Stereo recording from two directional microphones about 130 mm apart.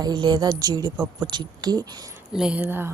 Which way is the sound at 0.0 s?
35° right (ahead or behind).